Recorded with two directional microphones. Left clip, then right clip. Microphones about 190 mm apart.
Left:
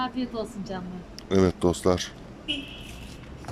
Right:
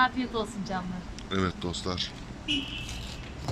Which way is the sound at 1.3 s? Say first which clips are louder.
Left 8 dB; 30° left (ahead or behind).